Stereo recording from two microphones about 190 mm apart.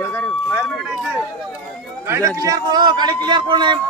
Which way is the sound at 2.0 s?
15° right (ahead or behind).